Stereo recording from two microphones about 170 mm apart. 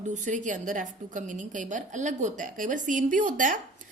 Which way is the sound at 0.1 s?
50° right (ahead or behind).